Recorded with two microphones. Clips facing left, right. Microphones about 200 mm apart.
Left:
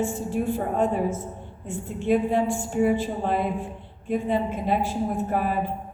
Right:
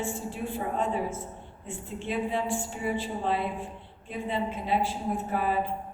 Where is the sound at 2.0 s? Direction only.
45° left (ahead or behind).